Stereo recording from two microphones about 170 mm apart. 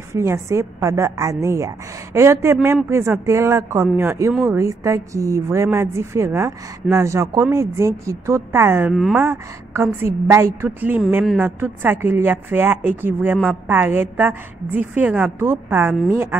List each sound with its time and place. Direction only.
0.1 s a woman's voice: 15° right (ahead or behind)
8.9 s speech: centre (ahead or behind)
9.2 s a woman's voice: 15° right (ahead or behind)